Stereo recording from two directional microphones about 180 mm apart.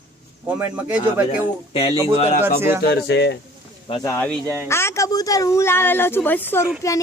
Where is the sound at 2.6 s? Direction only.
15° right (ahead or behind).